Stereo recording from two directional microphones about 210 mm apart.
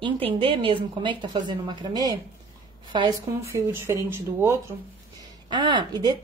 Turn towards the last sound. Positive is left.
turn(degrees=-20)  # may be behind; listen again after turning